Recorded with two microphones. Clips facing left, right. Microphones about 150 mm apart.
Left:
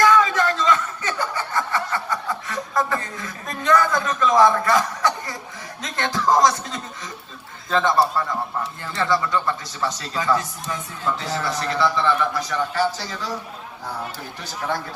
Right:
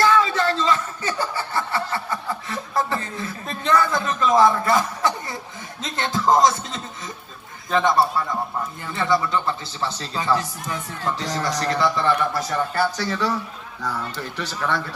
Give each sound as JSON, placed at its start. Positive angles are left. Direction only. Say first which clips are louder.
{"t": 0.0, "sound": "chuckle", "louder": "left 1 dB", "side_deg": -30}
{"t": 5.8, "sound": "music", "louder": "right 1 dB", "side_deg": -25}
{"t": 7.7, "sound": "a man's voice", "louder": "right 1 dB", "side_deg": -15}
{"t": 9.0, "sound": "a man's voice", "louder": "even", "side_deg": -20}
{"t": 13.0, "sound": "a man's voice", "louder": "right 6 dB", "side_deg": -65}